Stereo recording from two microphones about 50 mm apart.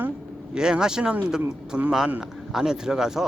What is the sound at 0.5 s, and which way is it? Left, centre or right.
A man's voice, centre.